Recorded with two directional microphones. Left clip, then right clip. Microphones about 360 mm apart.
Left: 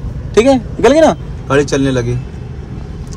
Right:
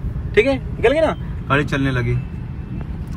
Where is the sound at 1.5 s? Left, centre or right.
Centre.